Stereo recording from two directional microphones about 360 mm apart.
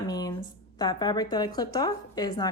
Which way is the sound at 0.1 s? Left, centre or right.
Centre.